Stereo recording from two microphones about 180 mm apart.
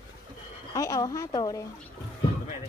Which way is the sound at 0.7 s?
20° left (ahead or behind).